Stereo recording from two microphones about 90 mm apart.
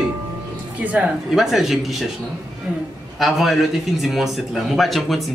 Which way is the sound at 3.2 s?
Centre (ahead or behind).